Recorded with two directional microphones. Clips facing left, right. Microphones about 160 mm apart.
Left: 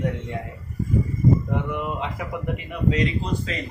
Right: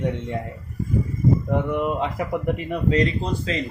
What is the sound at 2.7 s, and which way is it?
Speech, 40° right (ahead or behind).